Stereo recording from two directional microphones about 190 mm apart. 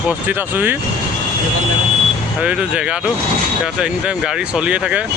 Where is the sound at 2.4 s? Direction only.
5° right (ahead or behind).